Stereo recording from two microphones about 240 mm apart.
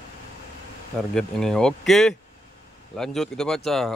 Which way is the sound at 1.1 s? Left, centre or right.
Centre.